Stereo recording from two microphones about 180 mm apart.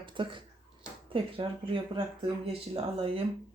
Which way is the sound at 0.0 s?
25° right (ahead or behind).